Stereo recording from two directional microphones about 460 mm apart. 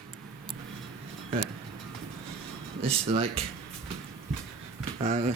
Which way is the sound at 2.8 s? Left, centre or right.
Centre.